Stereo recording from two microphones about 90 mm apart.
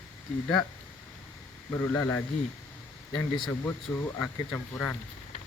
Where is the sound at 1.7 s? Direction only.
25° left (ahead or behind).